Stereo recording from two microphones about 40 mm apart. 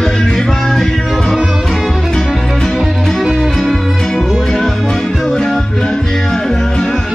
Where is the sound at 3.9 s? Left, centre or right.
Centre.